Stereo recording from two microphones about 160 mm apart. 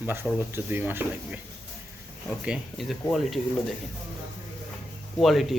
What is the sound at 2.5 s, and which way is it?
Speech, centre (ahead or behind).